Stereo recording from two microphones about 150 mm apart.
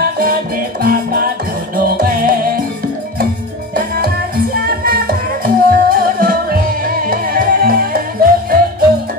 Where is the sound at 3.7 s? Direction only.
90° right.